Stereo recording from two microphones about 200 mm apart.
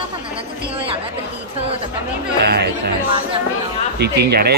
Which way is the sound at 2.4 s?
55° right (ahead or behind).